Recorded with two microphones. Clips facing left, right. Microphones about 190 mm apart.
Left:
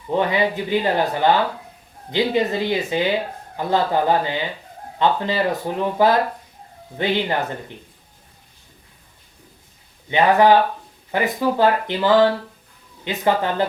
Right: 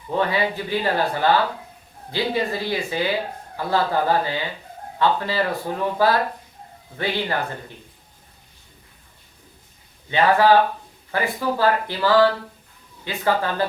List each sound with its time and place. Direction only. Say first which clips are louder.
0.1 s speech: left 2 dB; 20° left (ahead or behind)
10.1 s speech: left 2 dB; 20° left (ahead or behind)